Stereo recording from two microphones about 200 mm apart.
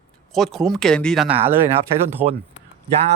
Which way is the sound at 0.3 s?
Centre (ahead or behind).